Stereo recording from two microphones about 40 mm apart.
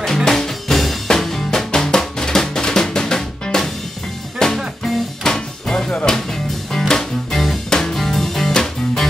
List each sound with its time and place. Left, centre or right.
0.0 s music: centre
1.7 s drum: centre
4.4 s music: centre